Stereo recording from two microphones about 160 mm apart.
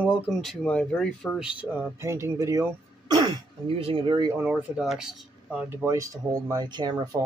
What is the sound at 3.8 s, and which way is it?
Speech, 35° right (ahead or behind).